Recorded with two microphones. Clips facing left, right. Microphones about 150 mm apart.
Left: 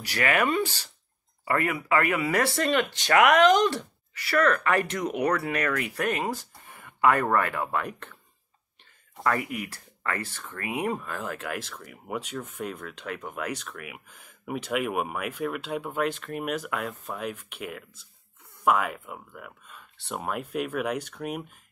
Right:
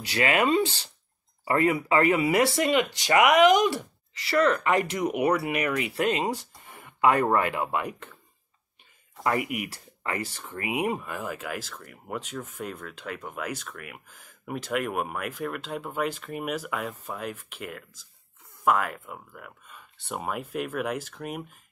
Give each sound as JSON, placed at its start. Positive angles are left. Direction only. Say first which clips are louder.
{"t": 0.0, "sound": "speech", "louder": "right 1 dB", "side_deg": -25}
{"t": 9.2, "sound": "speech", "louder": "right 1 dB", "side_deg": -15}
{"t": 11.1, "sound": "speech", "louder": "even", "side_deg": 0}